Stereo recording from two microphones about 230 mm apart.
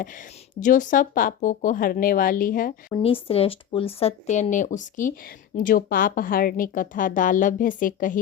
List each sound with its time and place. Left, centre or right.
0.6 s a woman's voice: left
2.9 s a woman's voice: left